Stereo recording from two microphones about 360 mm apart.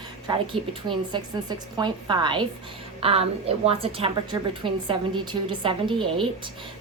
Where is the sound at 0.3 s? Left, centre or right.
Centre.